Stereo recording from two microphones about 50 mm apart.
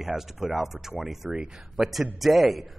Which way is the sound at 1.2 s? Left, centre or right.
Right.